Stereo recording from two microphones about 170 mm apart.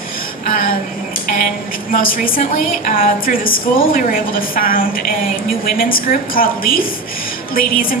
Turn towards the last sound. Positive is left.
turn(degrees=55)  # may be behind; listen again after turning